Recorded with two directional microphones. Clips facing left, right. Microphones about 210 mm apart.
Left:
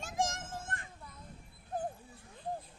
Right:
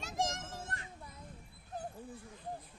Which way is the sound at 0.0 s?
50° left (ahead or behind).